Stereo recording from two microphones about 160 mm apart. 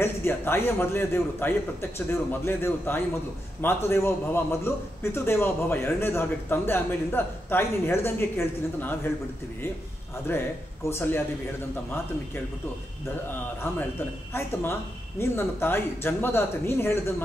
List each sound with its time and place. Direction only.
0.0 s a man's voice: 15° left (ahead or behind)
10.2 s a man's voice: 15° left (ahead or behind)
13.6 s a man's voice: 15° left (ahead or behind)